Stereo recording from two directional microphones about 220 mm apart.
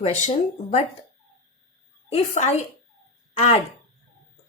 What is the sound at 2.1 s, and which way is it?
A woman's voice, 30° left (ahead or behind).